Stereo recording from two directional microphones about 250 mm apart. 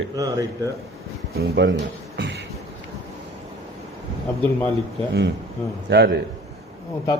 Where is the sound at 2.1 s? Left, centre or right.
Right.